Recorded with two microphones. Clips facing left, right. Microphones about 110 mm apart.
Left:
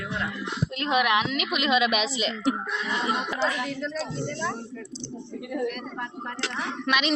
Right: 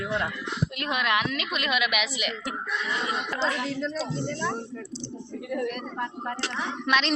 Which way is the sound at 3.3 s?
Centre (ahead or behind).